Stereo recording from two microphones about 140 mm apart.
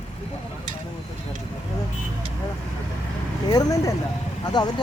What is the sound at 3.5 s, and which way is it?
Speech, 25° left (ahead or behind).